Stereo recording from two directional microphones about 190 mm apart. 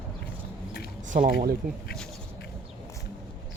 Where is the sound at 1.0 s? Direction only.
45° right (ahead or behind).